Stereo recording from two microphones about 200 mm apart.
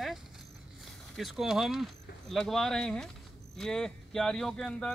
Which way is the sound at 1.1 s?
Centre (ahead or behind).